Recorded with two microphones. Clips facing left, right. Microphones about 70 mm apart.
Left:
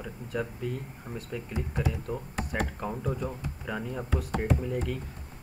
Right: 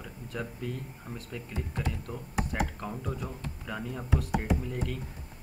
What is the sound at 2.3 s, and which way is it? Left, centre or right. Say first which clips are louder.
Speech: right 2 dB; centre.